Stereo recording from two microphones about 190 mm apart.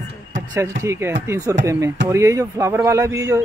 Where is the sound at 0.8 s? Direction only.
15° right (ahead or behind).